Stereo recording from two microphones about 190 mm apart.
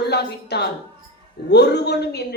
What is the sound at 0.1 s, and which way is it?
A woman's voice, 60° left (ahead or behind).